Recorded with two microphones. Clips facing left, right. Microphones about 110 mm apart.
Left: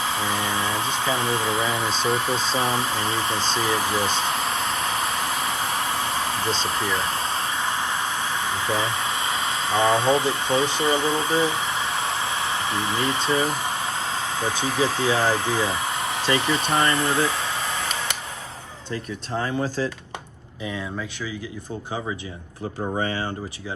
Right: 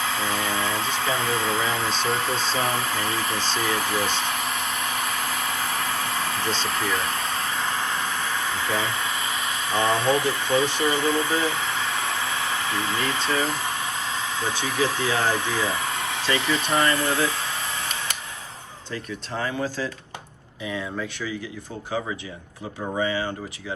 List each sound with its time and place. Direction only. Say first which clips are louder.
0.1 s a sound: left 1 dB; 15° left (ahead or behind)
1.7 s speech: left 1 dB; 5° left (ahead or behind)
2.0 s speech: left 3 dB; 15° left (ahead or behind)
2.5 s a sound: left 1 dB; 25° left (ahead or behind)
14.0 s speech: left 2 dB; 35° left (ahead or behind)
23.0 s speech: right 3 dB; 45° left (ahead or behind)